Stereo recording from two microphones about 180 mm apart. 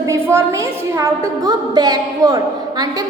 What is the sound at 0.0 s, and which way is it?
A woman's voice, 15° right (ahead or behind).